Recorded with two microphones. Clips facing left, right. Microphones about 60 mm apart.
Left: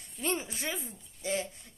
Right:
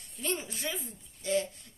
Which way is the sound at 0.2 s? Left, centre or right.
Left.